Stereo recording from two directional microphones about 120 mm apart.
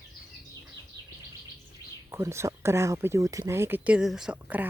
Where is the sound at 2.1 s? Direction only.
25° right (ahead or behind).